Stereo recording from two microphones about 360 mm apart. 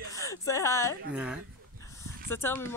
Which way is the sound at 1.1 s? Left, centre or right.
Centre.